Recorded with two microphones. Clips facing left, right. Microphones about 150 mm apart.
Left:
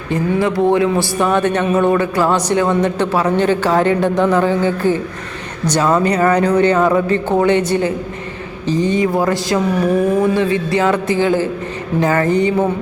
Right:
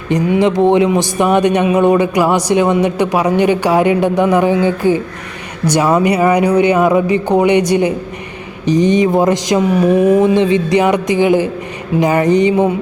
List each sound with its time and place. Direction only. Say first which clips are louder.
0.1 s a man's voice: right 4 dB; 20° right (ahead or behind)